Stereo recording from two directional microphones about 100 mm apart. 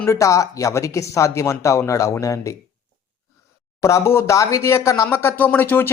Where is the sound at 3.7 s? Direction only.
30° left (ahead or behind).